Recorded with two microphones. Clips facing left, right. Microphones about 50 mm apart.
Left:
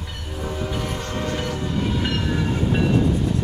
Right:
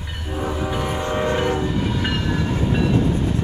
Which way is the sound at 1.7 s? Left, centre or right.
Centre.